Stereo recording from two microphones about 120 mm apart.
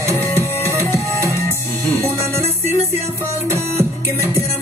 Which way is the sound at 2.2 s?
20° right (ahead or behind).